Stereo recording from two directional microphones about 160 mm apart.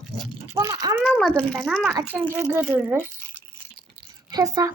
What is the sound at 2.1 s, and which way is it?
Speech, 10° right (ahead or behind).